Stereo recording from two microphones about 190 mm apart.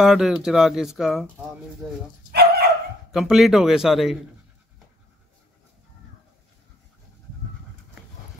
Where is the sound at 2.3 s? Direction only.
55° right (ahead or behind).